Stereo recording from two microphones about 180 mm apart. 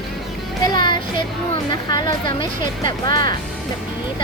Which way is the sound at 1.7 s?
25° left (ahead or behind).